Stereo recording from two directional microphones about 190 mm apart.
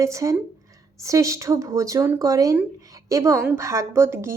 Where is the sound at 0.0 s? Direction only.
15° right (ahead or behind).